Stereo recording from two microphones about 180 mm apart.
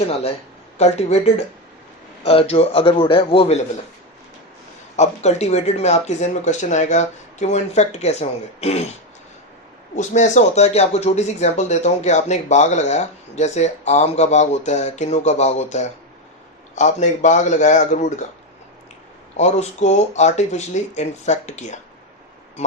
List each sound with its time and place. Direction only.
0.1 s speech: 35° left (ahead or behind)
4.9 s speech: 40° left (ahead or behind)
9.9 s speech: 40° left (ahead or behind)
19.4 s speech: 40° left (ahead or behind)